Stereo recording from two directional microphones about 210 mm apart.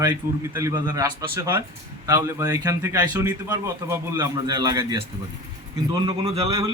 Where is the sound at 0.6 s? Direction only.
15° right (ahead or behind).